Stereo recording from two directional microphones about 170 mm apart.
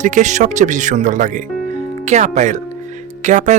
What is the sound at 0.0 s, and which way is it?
Speech, 45° right (ahead or behind).